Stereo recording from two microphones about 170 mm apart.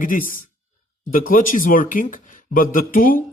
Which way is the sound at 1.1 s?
55° left (ahead or behind).